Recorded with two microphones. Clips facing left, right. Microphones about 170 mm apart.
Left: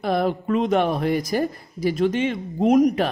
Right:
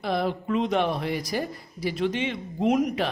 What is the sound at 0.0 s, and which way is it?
A man's voice, 50° left (ahead or behind).